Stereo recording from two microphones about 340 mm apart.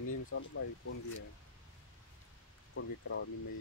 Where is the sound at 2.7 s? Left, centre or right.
Left.